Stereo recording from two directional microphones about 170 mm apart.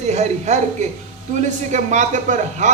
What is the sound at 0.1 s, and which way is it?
A man's voice, 45° right (ahead or behind).